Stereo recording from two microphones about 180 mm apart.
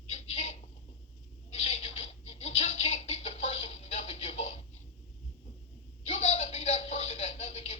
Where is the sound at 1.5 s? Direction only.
30° left (ahead or behind).